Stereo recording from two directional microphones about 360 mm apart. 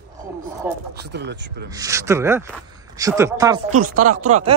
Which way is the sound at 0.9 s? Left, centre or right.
Right.